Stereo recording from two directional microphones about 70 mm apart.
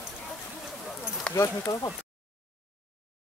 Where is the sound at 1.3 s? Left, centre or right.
Left.